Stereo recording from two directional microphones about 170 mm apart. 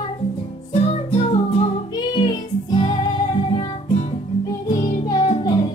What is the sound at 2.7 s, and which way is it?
Music, 30° left (ahead or behind).